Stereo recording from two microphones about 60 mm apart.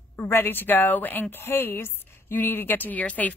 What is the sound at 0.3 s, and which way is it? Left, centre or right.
A woman's voice, left.